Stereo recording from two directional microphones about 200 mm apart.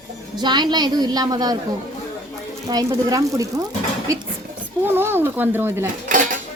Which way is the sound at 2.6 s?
20° right (ahead or behind).